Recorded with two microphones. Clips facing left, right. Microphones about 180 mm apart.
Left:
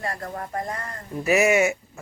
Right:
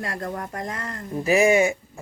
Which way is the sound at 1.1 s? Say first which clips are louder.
Right 1 dB; 30° right (ahead or behind).